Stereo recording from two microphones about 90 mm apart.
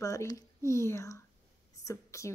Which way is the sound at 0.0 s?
35° left (ahead or behind).